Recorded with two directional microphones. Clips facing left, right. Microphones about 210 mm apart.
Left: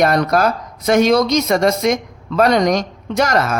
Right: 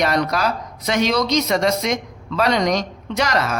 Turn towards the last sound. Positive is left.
turn(degrees=50)  # may be behind; listen again after turning